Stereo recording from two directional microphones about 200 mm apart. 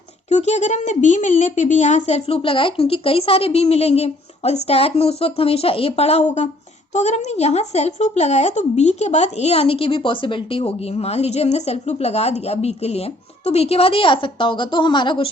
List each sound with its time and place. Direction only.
0.3 s speech: 35° left (ahead or behind)